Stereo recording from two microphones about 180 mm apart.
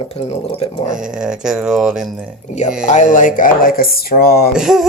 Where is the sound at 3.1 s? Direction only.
45° left (ahead or behind).